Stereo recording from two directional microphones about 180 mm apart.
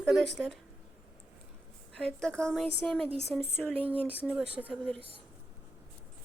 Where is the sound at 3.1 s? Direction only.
35° right (ahead or behind).